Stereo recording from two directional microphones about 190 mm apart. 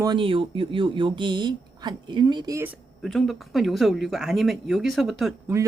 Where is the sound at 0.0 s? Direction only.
25° right (ahead or behind).